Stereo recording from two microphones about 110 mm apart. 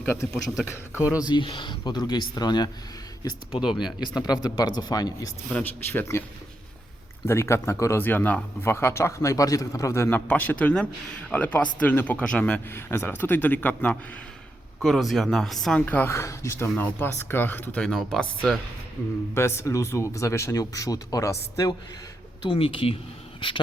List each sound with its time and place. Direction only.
0.0 s a man's voice: 20° left (ahead or behind)
1.0 s speech: 10° right (ahead or behind)
1.3 s speech: 50° left (ahead or behind)
3.6 s speech: 5° right (ahead or behind)
4.0 s speech: 40° left (ahead or behind)
5.5 s speech: 15° left (ahead or behind)
7.3 s speech: 25° left (ahead or behind)
14.8 s speech: centre (ahead or behind)
15.9 s speech: 20° left (ahead or behind)
17.8 s speech: 5° left (ahead or behind)
19.3 s speech: 25° left (ahead or behind)
22.4 s speech: 55° left (ahead or behind)